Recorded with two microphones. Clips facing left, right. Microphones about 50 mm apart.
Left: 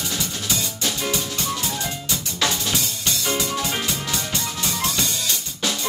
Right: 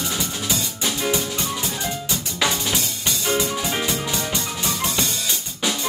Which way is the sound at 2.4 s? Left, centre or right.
Centre.